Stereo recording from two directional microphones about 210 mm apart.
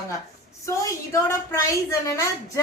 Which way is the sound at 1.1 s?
15° left (ahead or behind).